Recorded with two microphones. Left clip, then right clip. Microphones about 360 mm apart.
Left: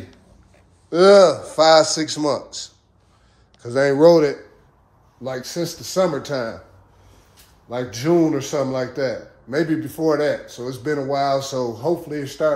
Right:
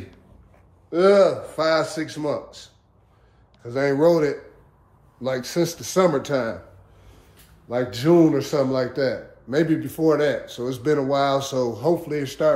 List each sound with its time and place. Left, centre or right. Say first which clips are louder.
0.8 s a man's voice: left 5 dB; left
3.6 s speech: left 5 dB; left
5.5 s speech: right 2 dB; centre
8.0 s a man's voice: right 1 dB; centre